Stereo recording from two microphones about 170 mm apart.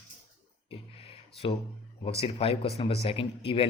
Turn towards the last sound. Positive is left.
turn(degrees=35)  # may be behind; listen again after turning